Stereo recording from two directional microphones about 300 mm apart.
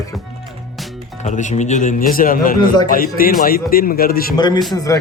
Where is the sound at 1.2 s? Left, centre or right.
Left.